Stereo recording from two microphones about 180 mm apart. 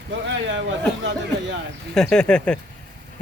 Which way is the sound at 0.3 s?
85° right.